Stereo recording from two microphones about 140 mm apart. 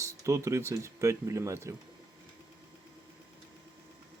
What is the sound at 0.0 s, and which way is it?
Speech, 20° right (ahead or behind).